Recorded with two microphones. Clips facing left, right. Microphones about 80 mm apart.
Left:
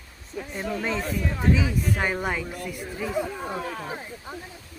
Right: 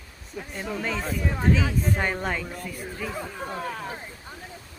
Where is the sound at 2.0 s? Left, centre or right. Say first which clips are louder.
Left 1 dB; centre.